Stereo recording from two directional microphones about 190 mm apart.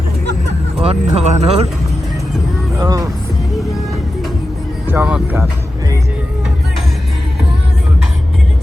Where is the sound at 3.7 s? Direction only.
Centre (ahead or behind).